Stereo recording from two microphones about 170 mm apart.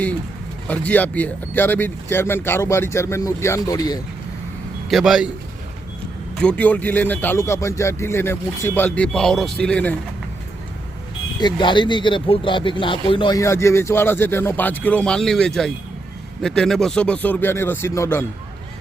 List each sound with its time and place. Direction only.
0.7 s speech: 10° left (ahead or behind)
4.9 s speech: centre (ahead or behind)
6.4 s speech: 10° left (ahead or behind)
11.3 s speech: 25° left (ahead or behind)